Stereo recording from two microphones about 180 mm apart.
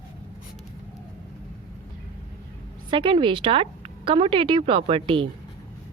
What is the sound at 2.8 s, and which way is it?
A woman's voice, 30° right (ahead or behind).